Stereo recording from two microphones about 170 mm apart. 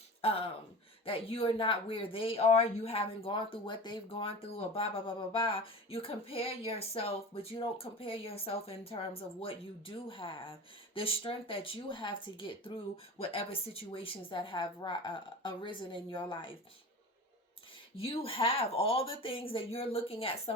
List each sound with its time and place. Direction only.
0.2 s speech: 35° left (ahead or behind)
17.9 s speech: 35° left (ahead or behind)